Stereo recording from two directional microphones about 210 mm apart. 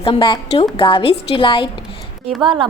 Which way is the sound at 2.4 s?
20° right (ahead or behind).